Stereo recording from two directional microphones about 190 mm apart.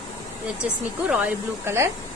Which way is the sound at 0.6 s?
5° right (ahead or behind).